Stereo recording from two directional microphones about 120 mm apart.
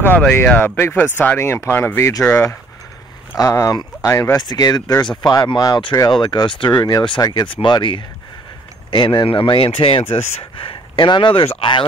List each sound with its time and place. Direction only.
0.0 s speech: 15° left (ahead or behind); by 7.4 s 30° left (ahead or behind)
7.4 s speech: 45° left (ahead or behind)